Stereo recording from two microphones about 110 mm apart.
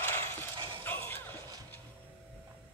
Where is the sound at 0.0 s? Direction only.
20° left (ahead or behind).